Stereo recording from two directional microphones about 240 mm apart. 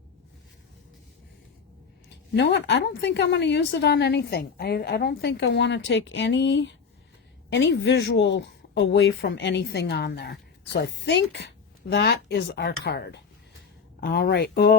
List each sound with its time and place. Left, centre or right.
2.0 s speech: left